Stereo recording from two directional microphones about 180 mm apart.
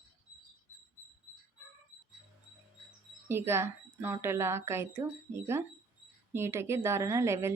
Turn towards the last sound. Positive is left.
turn(degrees=-15)  # may be behind; listen again after turning